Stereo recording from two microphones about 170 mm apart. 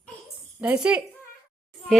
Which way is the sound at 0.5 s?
5° right (ahead or behind).